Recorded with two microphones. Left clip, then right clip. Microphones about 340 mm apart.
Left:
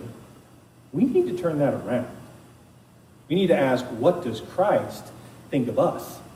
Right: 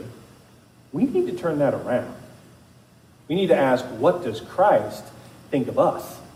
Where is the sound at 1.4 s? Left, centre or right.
Right.